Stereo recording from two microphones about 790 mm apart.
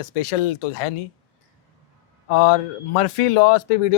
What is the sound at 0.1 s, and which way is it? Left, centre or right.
Speech, left.